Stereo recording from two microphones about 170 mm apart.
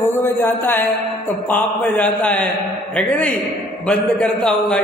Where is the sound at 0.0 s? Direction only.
15° left (ahead or behind).